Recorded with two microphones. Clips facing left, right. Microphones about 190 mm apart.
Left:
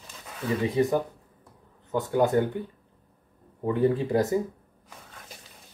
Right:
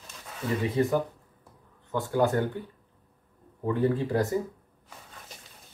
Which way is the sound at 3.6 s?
15° left (ahead or behind).